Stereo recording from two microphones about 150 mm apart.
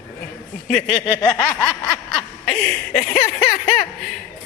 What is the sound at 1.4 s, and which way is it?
Speech, 10° left (ahead or behind).